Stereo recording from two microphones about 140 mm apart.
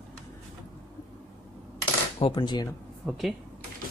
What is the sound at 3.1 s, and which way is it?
Speech, centre (ahead or behind).